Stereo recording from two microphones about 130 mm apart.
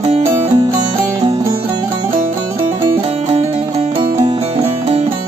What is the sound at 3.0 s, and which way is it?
Music, 50° right (ahead or behind).